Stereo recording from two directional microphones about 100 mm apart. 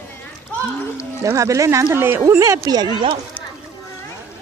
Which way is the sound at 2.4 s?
40° right (ahead or behind).